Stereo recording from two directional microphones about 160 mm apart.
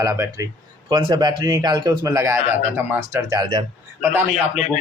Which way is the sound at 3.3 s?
25° right (ahead or behind).